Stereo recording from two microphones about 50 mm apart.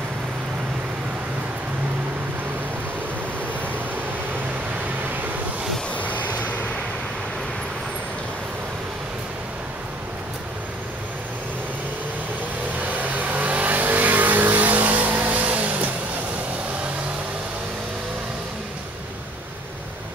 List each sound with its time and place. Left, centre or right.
5.9 s vehicle: left
13.0 s vehicle: right